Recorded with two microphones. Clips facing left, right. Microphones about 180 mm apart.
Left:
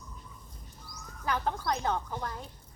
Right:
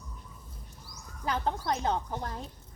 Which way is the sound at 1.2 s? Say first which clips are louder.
Even; 25° right (ahead or behind).